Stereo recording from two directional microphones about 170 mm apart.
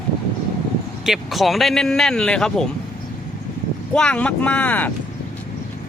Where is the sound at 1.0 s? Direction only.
Centre (ahead or behind).